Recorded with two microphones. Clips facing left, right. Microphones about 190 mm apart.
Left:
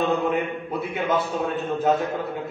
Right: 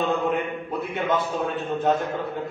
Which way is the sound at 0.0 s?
Centre (ahead or behind).